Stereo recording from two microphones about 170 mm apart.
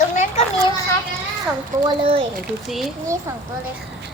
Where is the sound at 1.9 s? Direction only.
30° right (ahead or behind).